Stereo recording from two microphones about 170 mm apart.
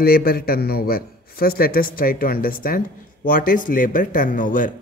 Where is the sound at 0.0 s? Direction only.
65° left (ahead or behind).